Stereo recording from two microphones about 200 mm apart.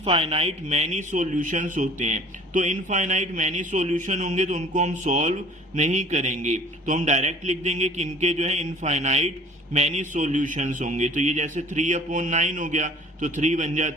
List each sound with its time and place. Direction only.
0.0 s speech: 30° right (ahead or behind)